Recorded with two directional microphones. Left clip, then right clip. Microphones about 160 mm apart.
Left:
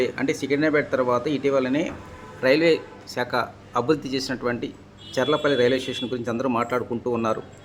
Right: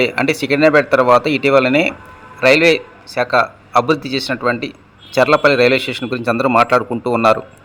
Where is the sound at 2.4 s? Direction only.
20° right (ahead or behind).